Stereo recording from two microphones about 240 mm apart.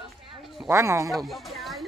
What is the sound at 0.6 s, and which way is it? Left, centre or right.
Speech, centre.